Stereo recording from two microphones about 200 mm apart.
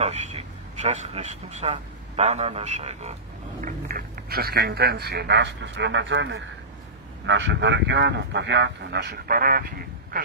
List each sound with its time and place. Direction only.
0.0 s a man's voice: 30° right (ahead or behind)
3.6 s speech: 45° right (ahead or behind)